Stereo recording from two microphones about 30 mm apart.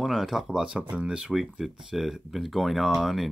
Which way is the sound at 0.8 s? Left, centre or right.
Right.